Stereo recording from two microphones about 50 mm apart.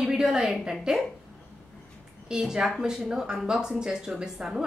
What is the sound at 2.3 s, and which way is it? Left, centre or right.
A woman's voice, centre.